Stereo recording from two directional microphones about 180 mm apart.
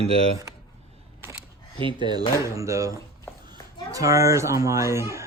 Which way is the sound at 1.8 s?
25° right (ahead or behind).